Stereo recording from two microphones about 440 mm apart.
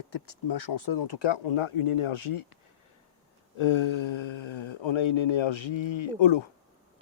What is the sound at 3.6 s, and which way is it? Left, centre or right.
Speech, left.